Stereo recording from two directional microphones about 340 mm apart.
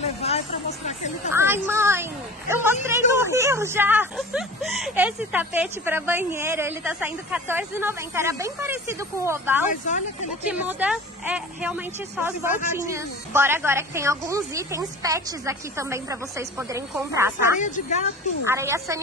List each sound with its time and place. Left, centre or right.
0.0 s a woman's voice: centre
1.3 s a woman's voice: centre
9.7 s speech: left
10.5 s a woman's voice: centre
17.6 s speech: left
18.4 s a woman's voice: centre